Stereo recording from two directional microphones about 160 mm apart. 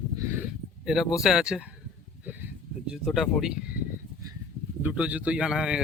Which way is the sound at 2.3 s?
10° right (ahead or behind).